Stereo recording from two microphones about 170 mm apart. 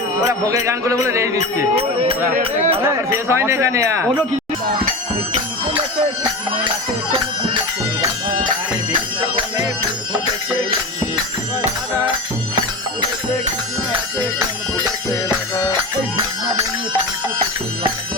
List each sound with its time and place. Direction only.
0.4 s speech: 20° right (ahead or behind)
1.7 s speech: 35° right (ahead or behind)
2.8 s speech: 15° right (ahead or behind)
7.1 s music: 30° right (ahead or behind)